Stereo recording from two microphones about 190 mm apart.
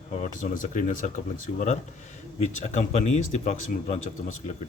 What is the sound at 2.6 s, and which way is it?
Speech, 35° left (ahead or behind).